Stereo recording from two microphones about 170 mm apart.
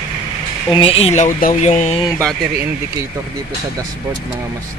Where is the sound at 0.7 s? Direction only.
35° left (ahead or behind).